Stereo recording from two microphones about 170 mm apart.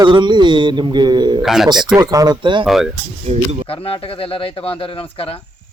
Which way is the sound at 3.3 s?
40° right (ahead or behind).